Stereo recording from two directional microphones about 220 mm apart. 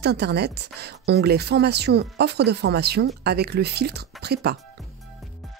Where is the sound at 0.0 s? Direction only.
50° right (ahead or behind).